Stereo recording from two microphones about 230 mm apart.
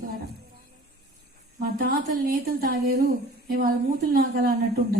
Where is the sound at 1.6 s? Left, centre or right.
Right.